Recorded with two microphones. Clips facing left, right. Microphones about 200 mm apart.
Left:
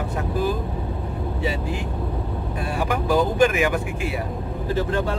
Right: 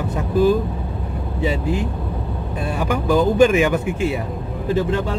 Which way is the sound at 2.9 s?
25° right (ahead or behind).